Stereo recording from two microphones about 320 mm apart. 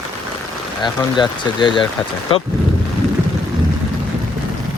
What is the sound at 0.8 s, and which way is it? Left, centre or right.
Speech, centre.